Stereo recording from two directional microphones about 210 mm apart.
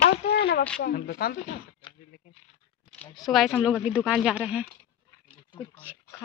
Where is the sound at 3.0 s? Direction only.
Centre (ahead or behind).